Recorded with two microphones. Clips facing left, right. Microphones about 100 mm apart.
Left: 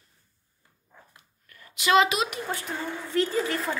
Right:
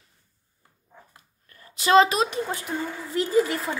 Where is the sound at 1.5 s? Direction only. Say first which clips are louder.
Right 3 dB; 35° right (ahead or behind).